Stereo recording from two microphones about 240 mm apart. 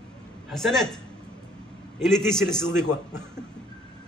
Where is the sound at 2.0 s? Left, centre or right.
Centre.